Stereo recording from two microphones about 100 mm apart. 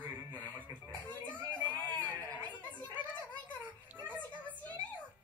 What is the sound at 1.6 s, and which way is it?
Baby cry, 15° left (ahead or behind).